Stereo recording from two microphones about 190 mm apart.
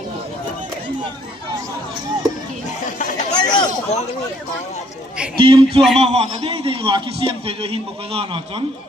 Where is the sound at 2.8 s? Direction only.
40° left (ahead or behind).